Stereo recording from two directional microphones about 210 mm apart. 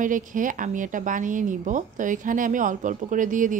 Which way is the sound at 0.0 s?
40° right (ahead or behind).